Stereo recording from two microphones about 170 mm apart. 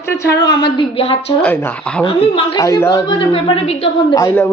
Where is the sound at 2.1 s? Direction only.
30° left (ahead or behind).